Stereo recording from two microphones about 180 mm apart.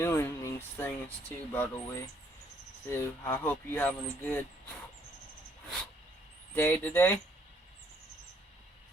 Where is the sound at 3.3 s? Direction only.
10° left (ahead or behind).